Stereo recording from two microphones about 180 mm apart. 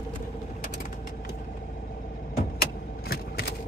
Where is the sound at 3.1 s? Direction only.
60° left (ahead or behind).